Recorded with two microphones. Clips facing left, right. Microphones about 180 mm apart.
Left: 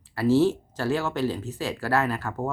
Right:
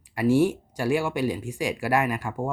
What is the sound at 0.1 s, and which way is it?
Speech, 15° right (ahead or behind).